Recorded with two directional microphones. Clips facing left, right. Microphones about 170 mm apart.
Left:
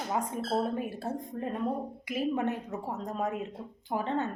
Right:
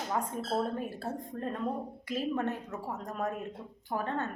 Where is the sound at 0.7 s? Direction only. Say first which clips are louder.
Left 2 dB; 10° left (ahead or behind).